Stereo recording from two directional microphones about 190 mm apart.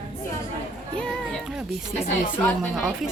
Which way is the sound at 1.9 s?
35° left (ahead or behind).